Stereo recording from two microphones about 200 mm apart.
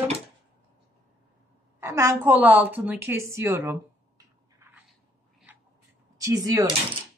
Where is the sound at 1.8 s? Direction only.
15° right (ahead or behind).